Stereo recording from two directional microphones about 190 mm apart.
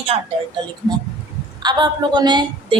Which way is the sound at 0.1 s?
30° right (ahead or behind).